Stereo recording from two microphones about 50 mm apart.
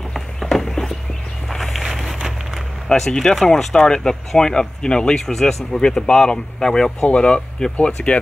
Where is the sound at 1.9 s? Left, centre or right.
Centre.